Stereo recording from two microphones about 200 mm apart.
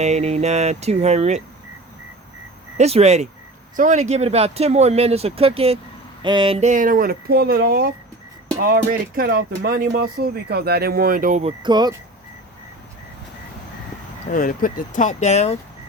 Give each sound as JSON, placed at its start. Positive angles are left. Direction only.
{"t": 0.0, "sound": "speech", "side_deg": -35}
{"t": 2.7, "sound": "speech", "side_deg": -30}
{"t": 11.6, "sound": "speech", "side_deg": -20}
{"t": 14.3, "sound": "speech", "side_deg": 45}